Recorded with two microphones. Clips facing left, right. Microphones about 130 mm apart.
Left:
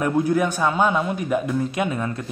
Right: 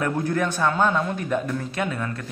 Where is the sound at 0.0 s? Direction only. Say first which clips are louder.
Left 4 dB; 10° left (ahead or behind).